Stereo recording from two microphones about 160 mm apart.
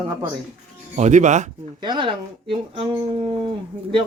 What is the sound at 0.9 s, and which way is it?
Speech, 50° right (ahead or behind).